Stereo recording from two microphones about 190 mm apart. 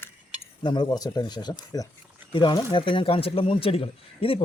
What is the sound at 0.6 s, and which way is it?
Speech, 25° left (ahead or behind).